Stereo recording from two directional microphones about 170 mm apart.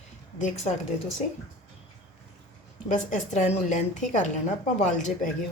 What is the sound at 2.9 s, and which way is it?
A woman's voice, 45° left (ahead or behind).